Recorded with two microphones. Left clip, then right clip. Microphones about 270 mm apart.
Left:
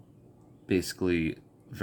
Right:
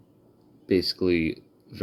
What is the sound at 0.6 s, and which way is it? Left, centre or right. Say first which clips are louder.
Speech: right 5 dB; left.